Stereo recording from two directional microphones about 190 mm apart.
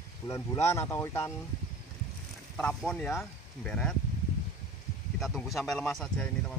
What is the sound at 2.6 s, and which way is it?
Speech, 5° left (ahead or behind).